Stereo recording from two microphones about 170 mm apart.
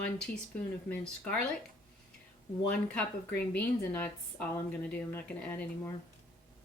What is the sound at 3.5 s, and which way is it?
Speech, 10° left (ahead or behind).